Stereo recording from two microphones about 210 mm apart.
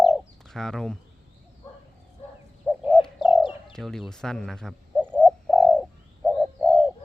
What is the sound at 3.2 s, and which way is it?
Bird, 25° left (ahead or behind).